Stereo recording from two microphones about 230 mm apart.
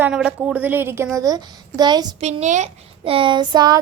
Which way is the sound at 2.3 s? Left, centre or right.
Right.